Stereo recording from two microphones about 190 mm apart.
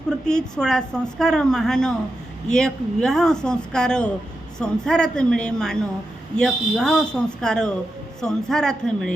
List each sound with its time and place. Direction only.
0.3 s a woman's voice: 5° left (ahead or behind)